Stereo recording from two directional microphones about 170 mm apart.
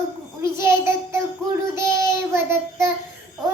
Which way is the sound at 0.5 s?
15° right (ahead or behind).